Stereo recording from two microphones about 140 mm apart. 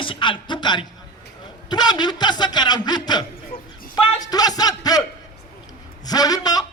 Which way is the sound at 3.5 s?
90° left.